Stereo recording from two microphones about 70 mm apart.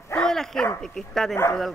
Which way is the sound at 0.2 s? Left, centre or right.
Centre.